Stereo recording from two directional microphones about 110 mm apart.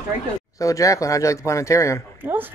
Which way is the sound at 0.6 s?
30° left (ahead or behind).